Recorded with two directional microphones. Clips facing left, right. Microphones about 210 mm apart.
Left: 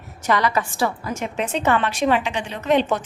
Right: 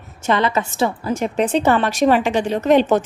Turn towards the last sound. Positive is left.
turn(degrees=-45)  # may be behind; listen again after turning